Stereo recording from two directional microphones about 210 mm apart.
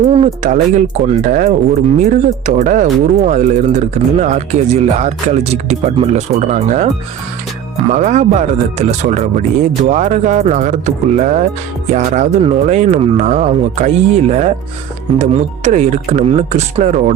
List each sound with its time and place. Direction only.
0.1 s speech: 25° right (ahead or behind)
7.9 s speech: 35° right (ahead or behind)